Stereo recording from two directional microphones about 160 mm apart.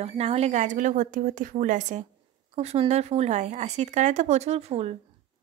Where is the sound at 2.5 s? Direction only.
40° right (ahead or behind).